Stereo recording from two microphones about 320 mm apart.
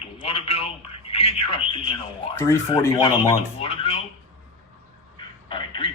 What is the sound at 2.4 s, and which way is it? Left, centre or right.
A man's voice, centre.